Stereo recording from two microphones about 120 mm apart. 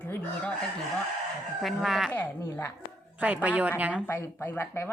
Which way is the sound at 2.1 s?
15° left (ahead or behind).